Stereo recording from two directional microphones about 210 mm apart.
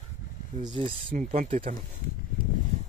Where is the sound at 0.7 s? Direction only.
25° right (ahead or behind).